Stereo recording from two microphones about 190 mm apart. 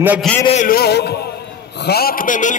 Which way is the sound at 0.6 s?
50° left (ahead or behind).